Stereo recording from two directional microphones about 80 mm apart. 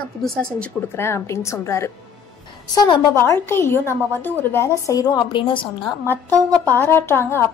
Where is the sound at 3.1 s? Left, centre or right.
Left.